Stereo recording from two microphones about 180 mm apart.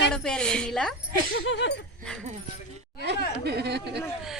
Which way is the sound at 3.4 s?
65° right (ahead or behind).